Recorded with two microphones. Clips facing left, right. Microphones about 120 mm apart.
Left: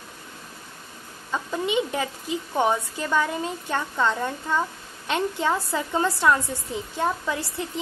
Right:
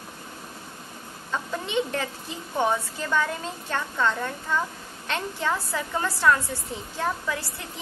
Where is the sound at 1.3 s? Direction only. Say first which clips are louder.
Left 3 dB; 10° left (ahead or behind).